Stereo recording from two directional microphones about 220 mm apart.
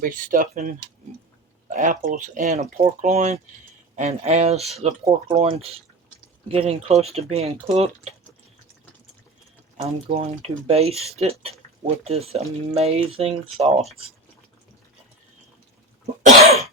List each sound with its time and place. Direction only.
0.0 s speech: 40° right (ahead or behind)
1.7 s speech: 35° right (ahead or behind)
10.1 s speech: 25° right (ahead or behind)
16.2 s cough: 30° right (ahead or behind)